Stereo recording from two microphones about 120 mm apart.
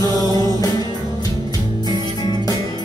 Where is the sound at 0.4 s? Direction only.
30° left (ahead or behind).